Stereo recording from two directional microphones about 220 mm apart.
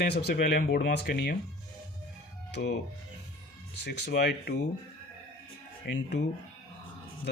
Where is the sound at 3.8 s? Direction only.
50° left (ahead or behind).